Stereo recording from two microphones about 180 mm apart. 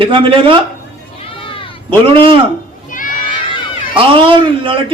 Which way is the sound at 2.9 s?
50° left (ahead or behind).